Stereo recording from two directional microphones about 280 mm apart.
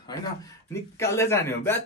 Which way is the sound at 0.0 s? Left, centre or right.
Centre.